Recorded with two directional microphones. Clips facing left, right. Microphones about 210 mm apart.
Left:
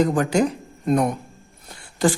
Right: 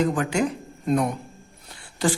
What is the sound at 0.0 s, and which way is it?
Speech, 40° left (ahead or behind).